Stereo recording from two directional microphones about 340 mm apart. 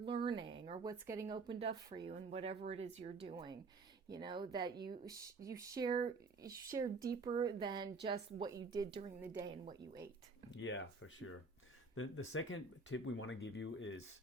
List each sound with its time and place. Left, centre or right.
0.0 s speech: centre
10.6 s speech: left